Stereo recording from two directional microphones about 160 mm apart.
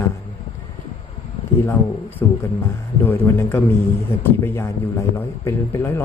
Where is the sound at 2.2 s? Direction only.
15° left (ahead or behind).